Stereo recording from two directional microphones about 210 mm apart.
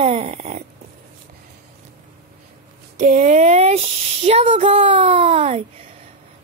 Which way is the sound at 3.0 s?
35° right (ahead or behind).